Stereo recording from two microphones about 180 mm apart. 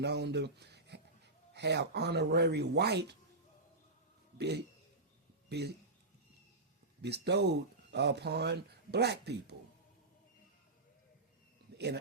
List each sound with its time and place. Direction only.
0.0 s speech: 70° right (ahead or behind)
4.4 s a man's voice: 65° right (ahead or behind)
7.0 s speech: 65° right (ahead or behind)